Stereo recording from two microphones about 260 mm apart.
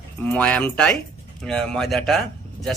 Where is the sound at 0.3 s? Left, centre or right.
Centre.